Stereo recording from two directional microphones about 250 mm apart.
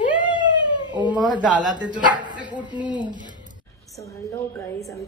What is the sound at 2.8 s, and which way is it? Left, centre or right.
Music, centre.